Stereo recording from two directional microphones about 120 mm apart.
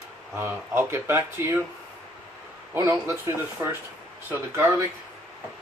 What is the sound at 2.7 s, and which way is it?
Speech, 20° right (ahead or behind).